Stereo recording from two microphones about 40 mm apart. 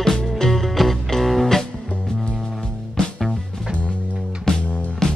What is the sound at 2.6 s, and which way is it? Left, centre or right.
Music, left.